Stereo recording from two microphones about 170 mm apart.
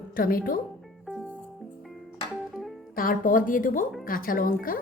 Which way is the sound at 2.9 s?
55° left (ahead or behind).